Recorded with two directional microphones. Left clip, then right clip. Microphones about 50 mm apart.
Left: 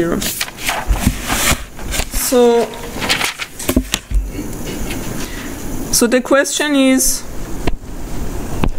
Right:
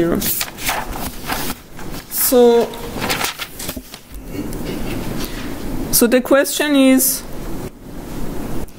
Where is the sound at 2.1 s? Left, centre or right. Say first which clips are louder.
Even; centre.